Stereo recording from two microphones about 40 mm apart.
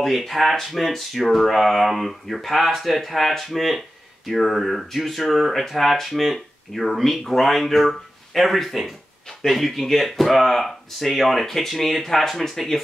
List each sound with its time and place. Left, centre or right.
0.0 s speech: centre